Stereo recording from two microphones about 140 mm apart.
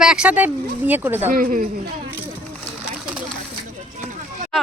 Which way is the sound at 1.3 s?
85° right.